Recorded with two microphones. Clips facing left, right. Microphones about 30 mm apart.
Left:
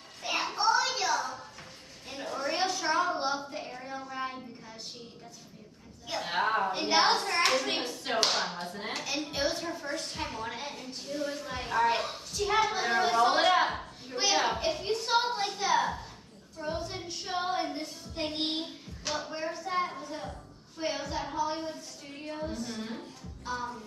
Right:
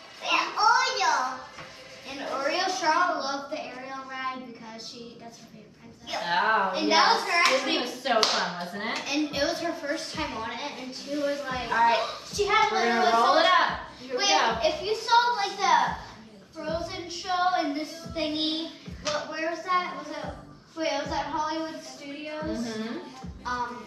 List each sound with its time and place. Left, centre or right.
0.2 s a sound: right
2.0 s a sound: right
6.2 s a woman's voice: right
16.5 s child singing: right
19.2 s a woman's voice: right
22.5 s music: right